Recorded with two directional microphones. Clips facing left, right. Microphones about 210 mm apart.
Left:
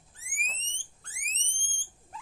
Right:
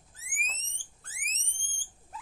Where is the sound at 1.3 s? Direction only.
40° right (ahead or behind).